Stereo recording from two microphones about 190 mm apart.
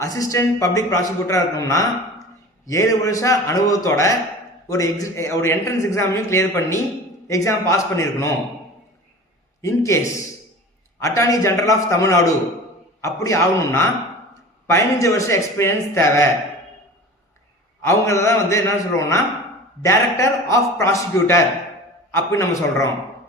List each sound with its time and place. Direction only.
0.0 s a man's voice: 15° left (ahead or behind)
9.6 s a man's voice: 15° left (ahead or behind)
11.0 s a man's voice: 15° left (ahead or behind)
17.8 s a man's voice: 15° left (ahead or behind)